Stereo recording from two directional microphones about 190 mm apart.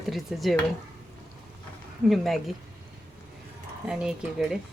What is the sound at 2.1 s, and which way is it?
Speech, centre (ahead or behind).